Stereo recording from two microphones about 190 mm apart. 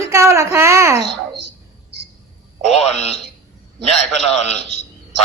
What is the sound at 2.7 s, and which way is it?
Speech, 35° left (ahead or behind).